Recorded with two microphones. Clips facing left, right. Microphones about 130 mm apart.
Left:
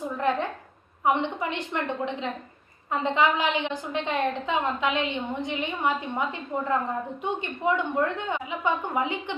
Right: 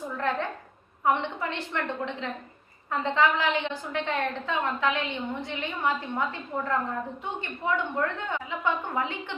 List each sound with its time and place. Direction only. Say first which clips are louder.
0.2 s a woman's voice: left 3 dB; 15° left (ahead or behind)